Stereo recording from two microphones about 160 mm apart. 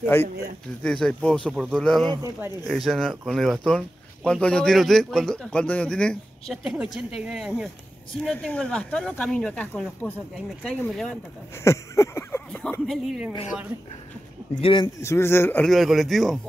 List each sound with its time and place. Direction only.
0.0 s speech: 15° left (ahead or behind)
11.5 s a sound: 15° left (ahead or behind); by 13.3 s centre (ahead or behind)
14.5 s speech: 30° left (ahead or behind)
15.0 s speech: 15° left (ahead or behind)
15.6 s speech: centre (ahead or behind)